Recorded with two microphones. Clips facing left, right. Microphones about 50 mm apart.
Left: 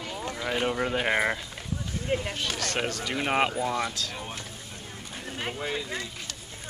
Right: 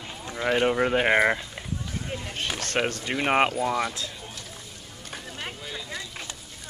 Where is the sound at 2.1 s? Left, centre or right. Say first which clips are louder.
Left 10 dB; left.